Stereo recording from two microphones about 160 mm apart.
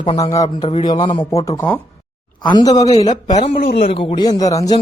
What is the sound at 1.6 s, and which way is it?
Speech, 10° left (ahead or behind).